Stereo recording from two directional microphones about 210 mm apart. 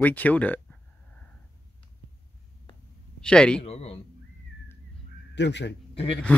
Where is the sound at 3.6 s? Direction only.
30° left (ahead or behind).